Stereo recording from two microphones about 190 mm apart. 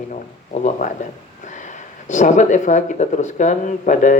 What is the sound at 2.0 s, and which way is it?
Speech, 40° left (ahead or behind).